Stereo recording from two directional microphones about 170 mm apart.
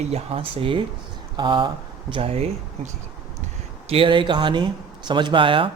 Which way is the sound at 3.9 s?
30° right (ahead or behind).